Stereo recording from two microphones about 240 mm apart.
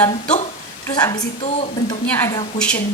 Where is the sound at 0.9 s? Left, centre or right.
Centre.